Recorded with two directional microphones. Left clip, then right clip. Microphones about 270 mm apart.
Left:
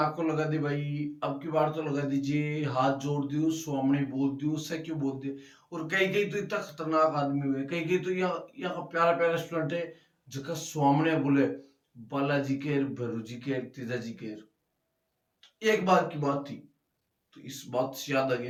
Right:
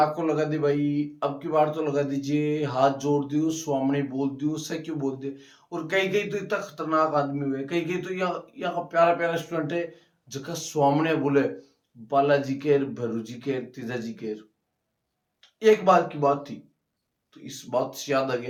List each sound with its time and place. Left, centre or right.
0.0 s speech: centre
15.4 s speech: centre